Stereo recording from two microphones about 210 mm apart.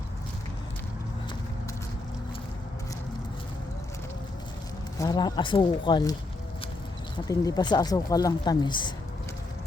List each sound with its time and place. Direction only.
4.9 s speech: 20° left (ahead or behind)
7.3 s speech: 15° left (ahead or behind)